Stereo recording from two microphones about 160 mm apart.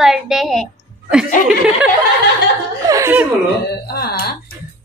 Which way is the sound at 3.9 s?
80° left.